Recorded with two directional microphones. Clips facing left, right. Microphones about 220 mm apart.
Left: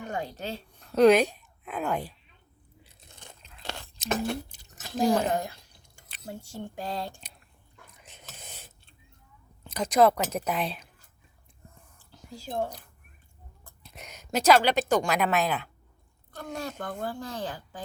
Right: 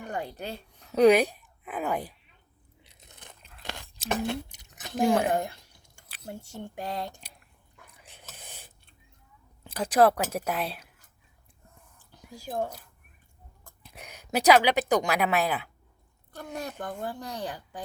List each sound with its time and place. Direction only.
0.0 s a woman's voice: 15° right (ahead or behind)
2.8 s biting: 20° right (ahead or behind)
3.6 s a sound: 15° right (ahead or behind)
4.8 s speech: 15° right (ahead or behind)
8.4 s a sound: 15° right (ahead or behind)
9.7 s a woman's voice: 10° right (ahead or behind)
12.3 s a woman's voice: 15° right (ahead or behind)
13.9 s a woman's voice: 10° right (ahead or behind)